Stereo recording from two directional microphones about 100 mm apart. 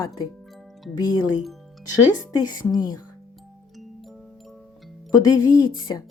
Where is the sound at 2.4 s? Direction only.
45° left (ahead or behind).